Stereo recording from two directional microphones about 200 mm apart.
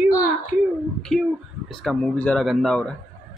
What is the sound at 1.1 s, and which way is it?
A man's voice, centre (ahead or behind).